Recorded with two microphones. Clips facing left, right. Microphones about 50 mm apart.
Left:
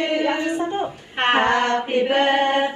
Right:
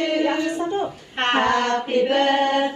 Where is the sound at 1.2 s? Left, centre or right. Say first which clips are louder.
Left 2 dB; centre.